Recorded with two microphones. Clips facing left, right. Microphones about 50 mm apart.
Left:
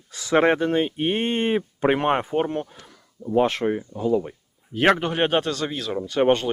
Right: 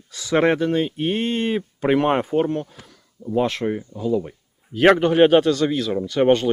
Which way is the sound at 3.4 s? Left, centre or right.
Centre.